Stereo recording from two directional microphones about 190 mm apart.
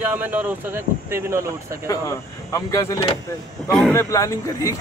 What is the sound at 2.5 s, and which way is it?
Speech, 15° left (ahead or behind).